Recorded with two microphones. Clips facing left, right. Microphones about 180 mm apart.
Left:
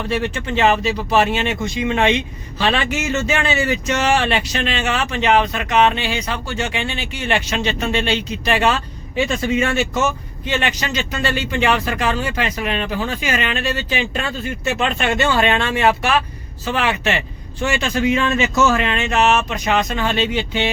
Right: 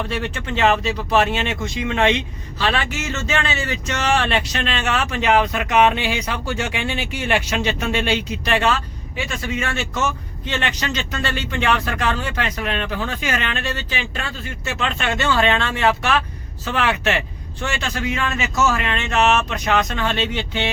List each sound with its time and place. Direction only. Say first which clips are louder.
0.1 s speech: left 4 dB; 5° left (ahead or behind)
2.6 s speech: left 3 dB; 20° left (ahead or behind); by 8.2 s 10° right (ahead or behind)
8.6 s speech: left 2 dB; 20° left (ahead or behind); by 13.8 s 5° left (ahead or behind)
13.9 s speech: left 6 dB; 20° left (ahead or behind)
16.6 s speech: left 1 dB; centre (ahead or behind)
17.7 s speech: left 7 dB; 15° left (ahead or behind)